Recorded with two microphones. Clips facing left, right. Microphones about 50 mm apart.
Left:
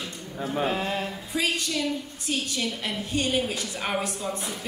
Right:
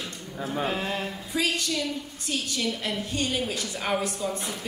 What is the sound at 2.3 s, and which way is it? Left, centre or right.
A woman's voice, centre.